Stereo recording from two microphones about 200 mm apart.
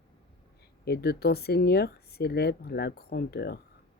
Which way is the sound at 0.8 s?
55° left (ahead or behind).